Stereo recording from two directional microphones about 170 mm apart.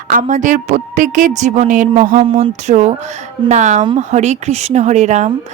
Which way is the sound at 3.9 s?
40° right (ahead or behind).